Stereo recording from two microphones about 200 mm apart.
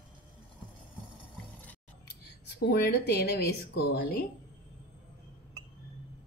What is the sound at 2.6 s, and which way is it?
Speech, 55° left (ahead or behind).